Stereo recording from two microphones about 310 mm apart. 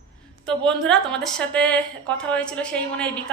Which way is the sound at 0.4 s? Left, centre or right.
Centre.